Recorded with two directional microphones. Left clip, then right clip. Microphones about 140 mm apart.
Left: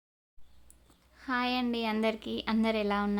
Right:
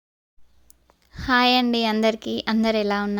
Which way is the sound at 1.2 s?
65° right (ahead or behind).